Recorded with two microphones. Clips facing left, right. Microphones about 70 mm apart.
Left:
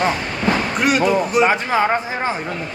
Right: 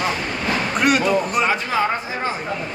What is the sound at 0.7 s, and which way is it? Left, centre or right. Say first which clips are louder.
Speech: right 1 dB; centre.